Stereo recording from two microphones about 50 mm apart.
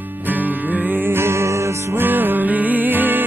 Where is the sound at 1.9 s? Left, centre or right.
Right.